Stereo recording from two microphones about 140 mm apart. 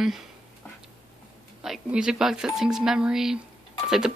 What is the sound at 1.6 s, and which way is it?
A woman's voice, 5° right (ahead or behind).